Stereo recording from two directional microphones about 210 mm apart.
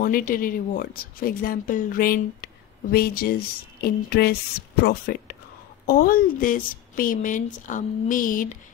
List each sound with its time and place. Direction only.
0.0 s a woman's voice: 40° left (ahead or behind)